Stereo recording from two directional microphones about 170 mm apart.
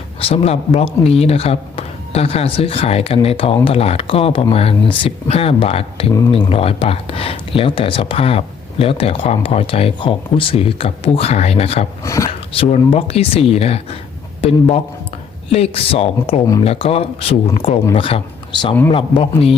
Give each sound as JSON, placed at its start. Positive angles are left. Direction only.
{"t": 0.2, "sound": "speech", "side_deg": 35}
{"t": 12.0, "sound": "speech", "side_deg": 20}
{"t": 12.5, "sound": "speech", "side_deg": 35}
{"t": 15.5, "sound": "speech", "side_deg": 35}